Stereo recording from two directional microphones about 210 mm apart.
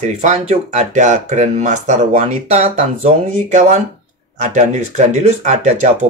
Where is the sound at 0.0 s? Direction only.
35° right (ahead or behind).